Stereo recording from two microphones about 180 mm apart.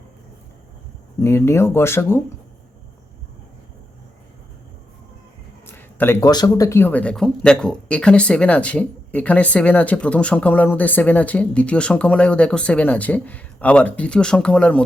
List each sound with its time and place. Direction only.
1.2 s speech: 15° left (ahead or behind)
5.6 s speech: 10° left (ahead or behind)